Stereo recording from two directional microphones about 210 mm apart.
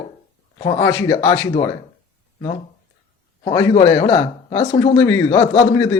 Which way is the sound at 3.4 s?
15° left (ahead or behind).